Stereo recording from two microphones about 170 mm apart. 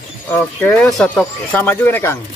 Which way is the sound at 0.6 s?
5° left (ahead or behind).